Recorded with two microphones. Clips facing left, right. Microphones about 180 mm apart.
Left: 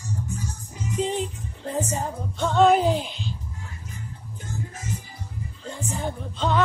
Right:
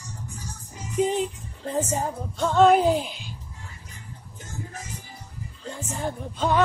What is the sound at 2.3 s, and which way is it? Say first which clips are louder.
Music: right 1 dB; centre (ahead or behind).